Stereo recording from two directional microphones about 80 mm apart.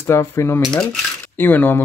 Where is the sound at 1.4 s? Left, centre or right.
Left.